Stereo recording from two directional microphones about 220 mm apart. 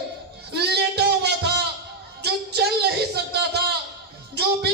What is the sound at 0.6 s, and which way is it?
Music, 50° right (ahead or behind).